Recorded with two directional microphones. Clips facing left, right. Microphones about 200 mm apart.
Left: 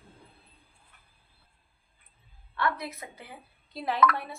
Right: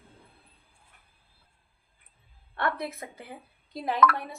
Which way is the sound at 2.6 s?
55° right (ahead or behind).